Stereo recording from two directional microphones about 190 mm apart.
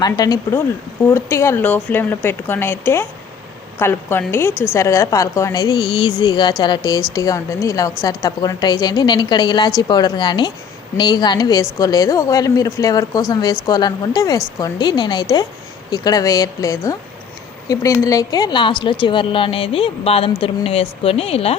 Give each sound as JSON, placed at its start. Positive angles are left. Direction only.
{"t": 0.0, "sound": "a woman's voice", "side_deg": 20}